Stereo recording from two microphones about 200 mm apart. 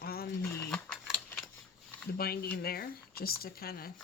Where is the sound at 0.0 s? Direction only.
50° left (ahead or behind).